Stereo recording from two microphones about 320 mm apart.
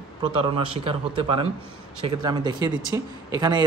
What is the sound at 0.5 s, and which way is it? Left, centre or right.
Speech, centre.